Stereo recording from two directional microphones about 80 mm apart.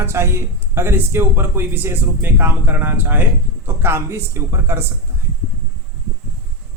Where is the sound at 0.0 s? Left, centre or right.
Right.